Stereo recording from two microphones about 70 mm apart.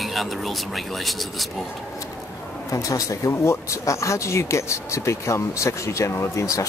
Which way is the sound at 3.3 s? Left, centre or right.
Left.